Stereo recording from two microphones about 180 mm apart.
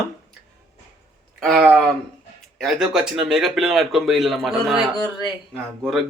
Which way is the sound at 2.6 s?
Centre (ahead or behind).